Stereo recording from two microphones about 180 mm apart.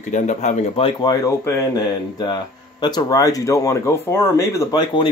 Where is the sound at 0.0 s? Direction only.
40° left (ahead or behind).